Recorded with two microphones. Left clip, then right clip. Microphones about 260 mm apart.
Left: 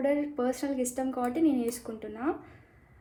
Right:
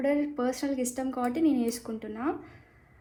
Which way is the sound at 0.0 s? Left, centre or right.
Right.